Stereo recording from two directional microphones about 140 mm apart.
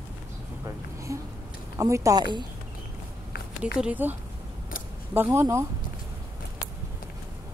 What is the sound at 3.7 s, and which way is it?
Speech, 10° right (ahead or behind).